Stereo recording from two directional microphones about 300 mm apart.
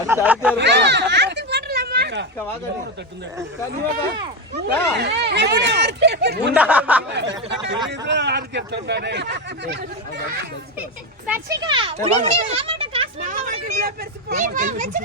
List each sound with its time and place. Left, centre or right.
0.1 s speech: centre
0.5 s a sound: right
4.5 s speech: right
6.5 s speech: centre
7.1 s speech: right
11.3 s a child's voice: centre; by 15.0 s right